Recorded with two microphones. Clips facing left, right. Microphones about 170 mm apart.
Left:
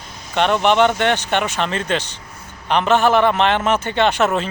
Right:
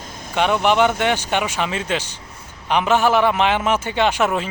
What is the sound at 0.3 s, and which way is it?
A man's voice, 10° right (ahead or behind).